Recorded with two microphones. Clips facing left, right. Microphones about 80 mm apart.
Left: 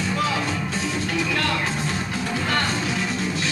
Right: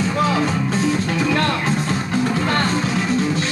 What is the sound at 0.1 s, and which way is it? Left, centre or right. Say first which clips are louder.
Music: right 3 dB; right.